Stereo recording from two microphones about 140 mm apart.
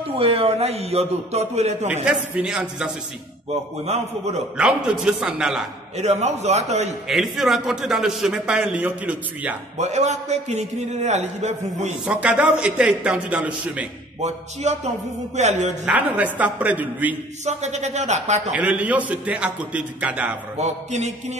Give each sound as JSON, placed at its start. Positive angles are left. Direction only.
{"t": 0.2, "sound": "a man's voice", "side_deg": -45}
{"t": 2.0, "sound": "a man's voice", "side_deg": -5}
{"t": 3.8, "sound": "a man's voice", "side_deg": -50}
{"t": 4.6, "sound": "a man's voice", "side_deg": -5}
{"t": 5.9, "sound": "a man's voice", "side_deg": -50}
{"t": 7.1, "sound": "a man's voice", "side_deg": 0}
{"t": 9.8, "sound": "a man's voice", "side_deg": -55}
{"t": 12.1, "sound": "a man's voice", "side_deg": -10}
{"t": 14.2, "sound": "a man's voice", "side_deg": -55}
{"t": 15.8, "sound": "a man's voice", "side_deg": -10}
{"t": 17.5, "sound": "a man's voice", "side_deg": -55}
{"t": 18.5, "sound": "a man's voice", "side_deg": -10}
{"t": 20.5, "sound": "a man's voice", "side_deg": -55}